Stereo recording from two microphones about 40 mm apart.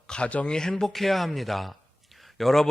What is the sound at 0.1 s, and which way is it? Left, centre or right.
Speech, left.